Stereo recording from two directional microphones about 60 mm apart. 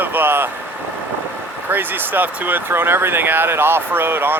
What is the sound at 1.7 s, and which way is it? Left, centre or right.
Speech, right.